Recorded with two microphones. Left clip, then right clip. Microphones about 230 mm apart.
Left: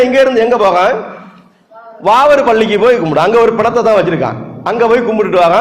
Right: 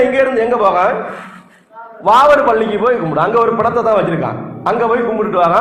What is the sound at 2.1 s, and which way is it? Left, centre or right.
A man's voice, left.